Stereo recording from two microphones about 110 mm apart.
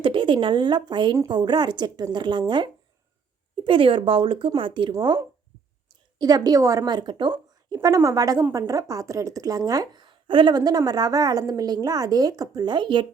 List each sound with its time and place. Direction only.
0.0 s a woman's voice: 50° right (ahead or behind)
3.6 s speech: 50° right (ahead or behind)
6.1 s a woman's voice: 35° right (ahead or behind)